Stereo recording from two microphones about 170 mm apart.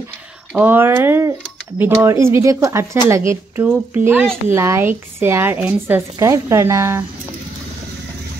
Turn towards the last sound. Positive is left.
turn(degrees=-15)  # may be behind; listen again after turning